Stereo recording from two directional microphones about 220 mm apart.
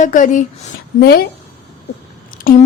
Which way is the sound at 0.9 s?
45° left (ahead or behind).